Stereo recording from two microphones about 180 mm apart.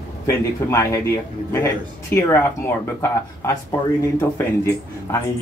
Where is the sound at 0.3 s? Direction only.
15° left (ahead or behind).